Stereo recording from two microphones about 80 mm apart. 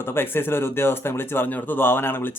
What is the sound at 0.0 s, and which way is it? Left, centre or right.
Speech, left.